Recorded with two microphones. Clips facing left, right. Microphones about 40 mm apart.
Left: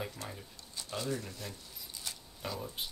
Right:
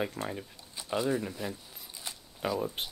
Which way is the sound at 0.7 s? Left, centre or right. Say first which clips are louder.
Right 7 dB; right.